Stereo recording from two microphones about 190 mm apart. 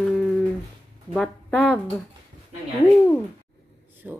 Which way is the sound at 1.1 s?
5° left (ahead or behind).